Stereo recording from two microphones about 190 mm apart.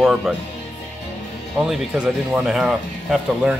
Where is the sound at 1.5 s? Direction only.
Centre (ahead or behind).